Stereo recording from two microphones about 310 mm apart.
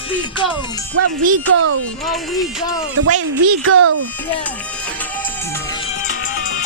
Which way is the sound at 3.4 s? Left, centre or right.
Right.